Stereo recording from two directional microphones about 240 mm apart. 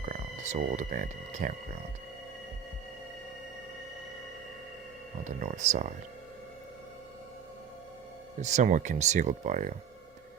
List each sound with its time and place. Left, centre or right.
0.0 s speech: right
5.2 s speech: right
8.4 s speech: right